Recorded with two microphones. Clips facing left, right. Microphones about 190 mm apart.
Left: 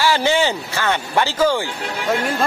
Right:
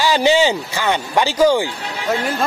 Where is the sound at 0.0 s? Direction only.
15° right (ahead or behind).